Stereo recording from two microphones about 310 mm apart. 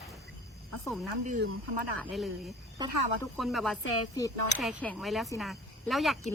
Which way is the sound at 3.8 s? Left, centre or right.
Left.